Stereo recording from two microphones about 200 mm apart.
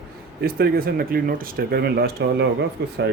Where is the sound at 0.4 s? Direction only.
50° right (ahead or behind).